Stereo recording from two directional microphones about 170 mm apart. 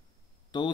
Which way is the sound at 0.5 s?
25° left (ahead or behind).